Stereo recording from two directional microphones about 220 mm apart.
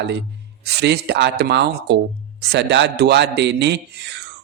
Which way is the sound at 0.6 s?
50° right (ahead or behind).